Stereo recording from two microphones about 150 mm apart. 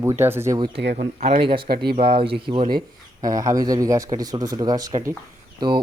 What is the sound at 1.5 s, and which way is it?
Speech, 85° right.